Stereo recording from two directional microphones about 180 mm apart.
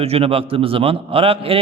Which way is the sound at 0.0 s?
35° right (ahead or behind).